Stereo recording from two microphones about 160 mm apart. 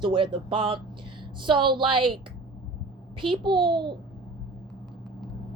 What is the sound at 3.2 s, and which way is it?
Speech, 30° right (ahead or behind).